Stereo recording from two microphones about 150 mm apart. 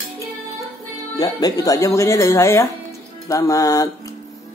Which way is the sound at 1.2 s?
25° left (ahead or behind).